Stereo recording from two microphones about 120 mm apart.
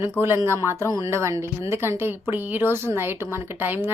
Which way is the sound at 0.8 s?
30° left (ahead or behind).